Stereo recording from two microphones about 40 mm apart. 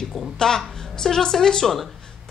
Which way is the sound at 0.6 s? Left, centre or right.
Centre.